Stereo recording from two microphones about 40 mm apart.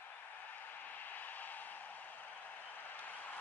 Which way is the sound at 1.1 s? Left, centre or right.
Left.